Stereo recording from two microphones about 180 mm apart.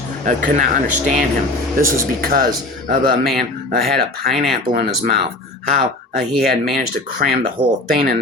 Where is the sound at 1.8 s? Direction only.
55° right (ahead or behind).